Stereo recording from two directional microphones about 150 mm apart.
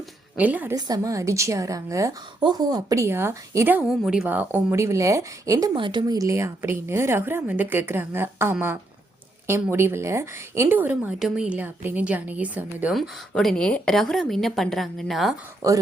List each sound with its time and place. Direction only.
0.3 s a woman's voice: 10° right (ahead or behind)
0.8 s speech: 25° right (ahead or behind)
3.8 s a woman's voice: centre (ahead or behind); by 5.7 s 20° right (ahead or behind)
5.7 s a woman's voice: 30° right (ahead or behind); by 8.5 s 15° right (ahead or behind)
9.6 s a woman's voice: 15° right (ahead or behind)
13.0 s a woman's voice: 5° left (ahead or behind)
15.6 s speech: 25° right (ahead or behind)